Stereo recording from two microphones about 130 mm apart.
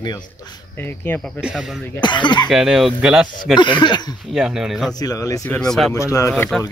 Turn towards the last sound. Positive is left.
turn(degrees=5)  # may be behind; listen again after turning